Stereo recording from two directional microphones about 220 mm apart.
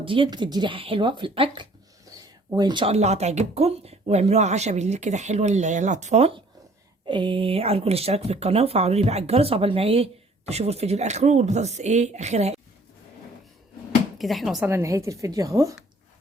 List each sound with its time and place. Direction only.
0.0 s speech: 25° right (ahead or behind)
2.1 s a sound: 15° right (ahead or behind)
2.5 s speech: 20° right (ahead or behind)
14.2 s speech: centre (ahead or behind)
14.7 s speech: 10° right (ahead or behind)